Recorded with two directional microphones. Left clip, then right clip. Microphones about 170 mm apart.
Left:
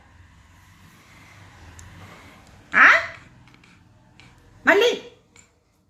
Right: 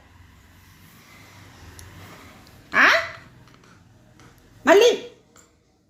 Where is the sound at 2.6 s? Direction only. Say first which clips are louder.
Left 3 dB; 30° right (ahead or behind).